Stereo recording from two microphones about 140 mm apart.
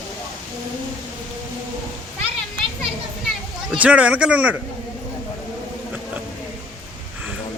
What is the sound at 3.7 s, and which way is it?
Speech, 10° right (ahead or behind).